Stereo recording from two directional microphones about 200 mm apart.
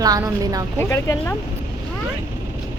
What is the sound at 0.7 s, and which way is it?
Speech, 15° left (ahead or behind).